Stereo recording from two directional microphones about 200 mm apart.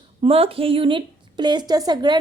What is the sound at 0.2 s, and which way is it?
A woman's voice, 30° right (ahead or behind).